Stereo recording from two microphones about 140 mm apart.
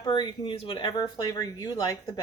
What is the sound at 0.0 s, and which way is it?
Speech, 30° left (ahead or behind).